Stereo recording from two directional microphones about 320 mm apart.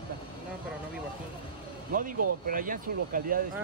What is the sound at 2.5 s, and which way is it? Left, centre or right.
Speech, right.